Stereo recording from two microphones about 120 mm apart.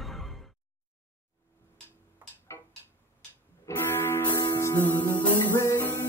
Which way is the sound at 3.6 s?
20° left (ahead or behind).